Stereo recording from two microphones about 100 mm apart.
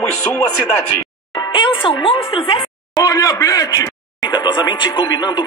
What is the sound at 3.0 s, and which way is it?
A man's voice, 40° left (ahead or behind).